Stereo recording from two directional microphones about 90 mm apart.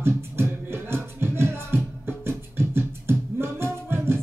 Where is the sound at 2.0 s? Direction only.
25° right (ahead or behind).